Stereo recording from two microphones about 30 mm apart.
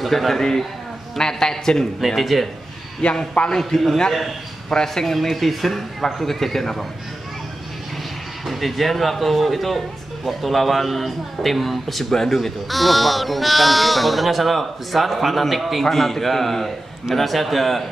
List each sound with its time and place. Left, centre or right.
0.0 s speech: centre
1.1 s a man's voice: centre
2.0 s speech: centre
3.0 s a man's voice: left
3.7 s a man's voice: centre
8.5 s speech: centre